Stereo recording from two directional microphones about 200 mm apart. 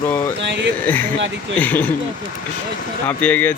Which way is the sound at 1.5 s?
10° left (ahead or behind).